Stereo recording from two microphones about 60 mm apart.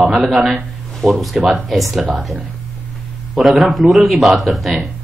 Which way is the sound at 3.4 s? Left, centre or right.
Centre.